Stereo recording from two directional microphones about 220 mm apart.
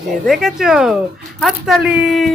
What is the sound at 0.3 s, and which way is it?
Speech, centre (ahead or behind).